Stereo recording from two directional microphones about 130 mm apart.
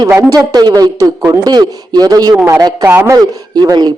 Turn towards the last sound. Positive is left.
turn(degrees=-30)  # may be behind; listen again after turning